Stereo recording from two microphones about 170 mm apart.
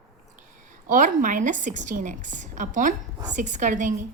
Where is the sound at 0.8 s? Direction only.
50° right (ahead or behind).